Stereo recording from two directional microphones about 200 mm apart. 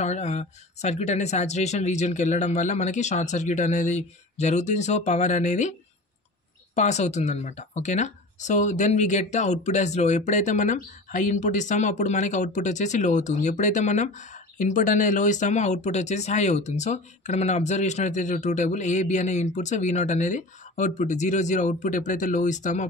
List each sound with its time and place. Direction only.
0.0 s speech: 35° left (ahead or behind)